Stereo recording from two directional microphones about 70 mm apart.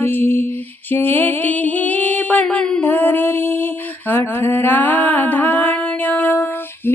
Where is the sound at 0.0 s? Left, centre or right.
Left.